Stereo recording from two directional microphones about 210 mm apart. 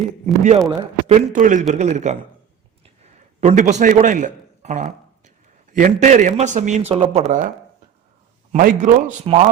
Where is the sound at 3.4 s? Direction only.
35° right (ahead or behind).